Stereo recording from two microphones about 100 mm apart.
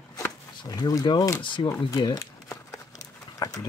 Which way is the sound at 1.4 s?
55° left (ahead or behind).